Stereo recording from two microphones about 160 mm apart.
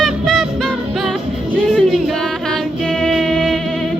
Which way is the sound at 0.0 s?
Centre (ahead or behind).